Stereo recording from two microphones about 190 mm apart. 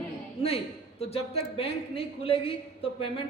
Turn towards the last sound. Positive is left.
turn(degrees=30)  # may be behind; listen again after turning